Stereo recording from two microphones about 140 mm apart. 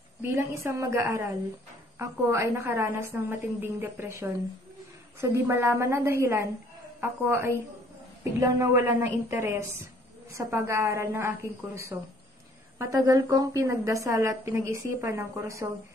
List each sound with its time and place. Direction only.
0.2 s a woman's voice: 20° right (ahead or behind)